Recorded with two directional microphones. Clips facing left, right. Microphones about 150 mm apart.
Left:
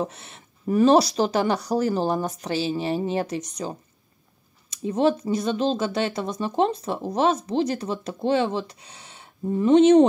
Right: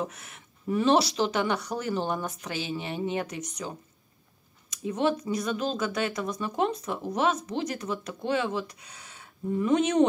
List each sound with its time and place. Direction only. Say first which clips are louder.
0.0 s speech: left 5 dB; 30° left (ahead or behind)
0.7 s speech: left 6 dB; 40° left (ahead or behind)